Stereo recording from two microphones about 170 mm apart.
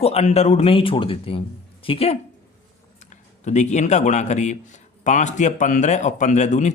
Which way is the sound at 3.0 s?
45° left (ahead or behind).